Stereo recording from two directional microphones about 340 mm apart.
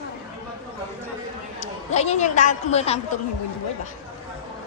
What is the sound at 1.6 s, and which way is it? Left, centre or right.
Speech, centre.